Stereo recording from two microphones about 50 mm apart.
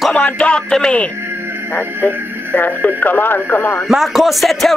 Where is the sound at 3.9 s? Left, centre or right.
Centre.